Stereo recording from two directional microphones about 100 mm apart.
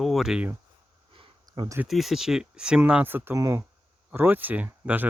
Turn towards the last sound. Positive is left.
turn(degrees=-20)  # may be behind; listen again after turning